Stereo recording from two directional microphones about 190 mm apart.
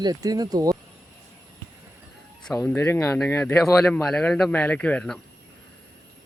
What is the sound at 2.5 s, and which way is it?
Speech, 10° left (ahead or behind).